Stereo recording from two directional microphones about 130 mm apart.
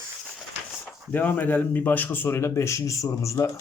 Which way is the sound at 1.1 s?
15° left (ahead or behind).